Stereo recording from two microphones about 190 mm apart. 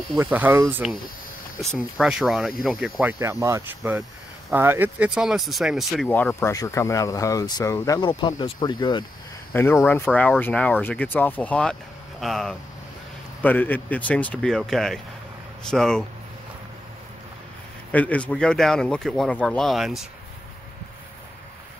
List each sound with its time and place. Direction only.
0.1 s speech: 10° right (ahead or behind)
1.6 s speech: centre (ahead or behind)
6.0 s speech: 10° left (ahead or behind)
9.5 s speech: 10° left (ahead or behind)
17.9 s speech: 5° left (ahead or behind)